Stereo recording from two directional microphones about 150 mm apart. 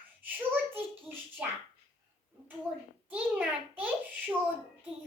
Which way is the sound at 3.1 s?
10° right (ahead or behind).